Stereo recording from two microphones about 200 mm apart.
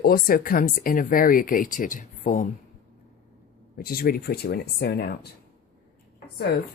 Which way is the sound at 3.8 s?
50° left (ahead or behind).